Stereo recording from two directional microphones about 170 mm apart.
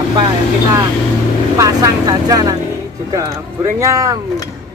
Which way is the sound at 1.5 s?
20° right (ahead or behind).